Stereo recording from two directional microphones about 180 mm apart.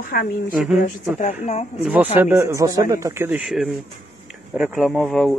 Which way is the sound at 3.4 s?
Centre (ahead or behind).